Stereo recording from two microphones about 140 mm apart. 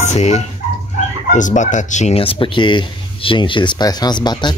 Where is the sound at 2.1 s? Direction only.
40° left (ahead or behind).